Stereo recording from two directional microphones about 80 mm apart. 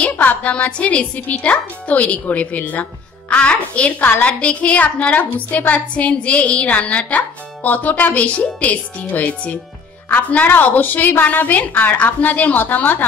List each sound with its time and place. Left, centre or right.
0.1 s a woman's voice: left